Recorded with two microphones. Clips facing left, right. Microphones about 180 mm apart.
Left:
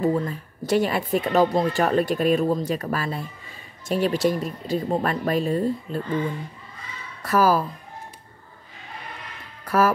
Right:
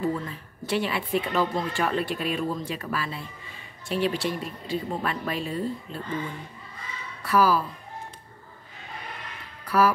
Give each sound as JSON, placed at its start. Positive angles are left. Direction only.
{"t": 0.0, "sound": "a woman's voice", "side_deg": 40}
{"t": 7.2, "sound": "speech", "side_deg": 45}
{"t": 9.7, "sound": "music", "side_deg": 45}